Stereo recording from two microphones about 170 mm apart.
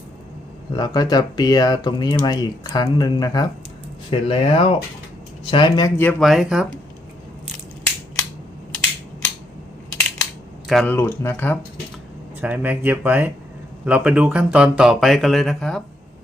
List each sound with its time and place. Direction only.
0.7 s speech: 25° left (ahead or behind)
4.1 s speech: 30° left (ahead or behind)
6.0 s speech: 5° left (ahead or behind)
10.7 s speech: centre (ahead or behind)
10.9 s speech: 15° left (ahead or behind)
12.4 s speech: 10° right (ahead or behind)